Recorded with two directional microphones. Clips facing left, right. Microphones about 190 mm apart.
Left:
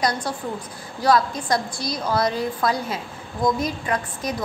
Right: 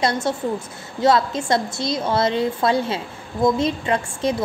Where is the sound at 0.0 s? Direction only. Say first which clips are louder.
Right 4 dB; 25° right (ahead or behind).